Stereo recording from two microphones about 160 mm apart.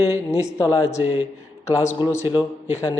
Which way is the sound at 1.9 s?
30° left (ahead or behind).